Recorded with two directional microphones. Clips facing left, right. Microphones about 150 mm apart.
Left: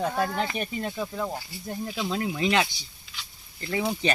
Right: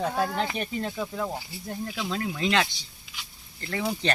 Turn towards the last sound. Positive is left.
turn(degrees=10)  # may be behind; listen again after turning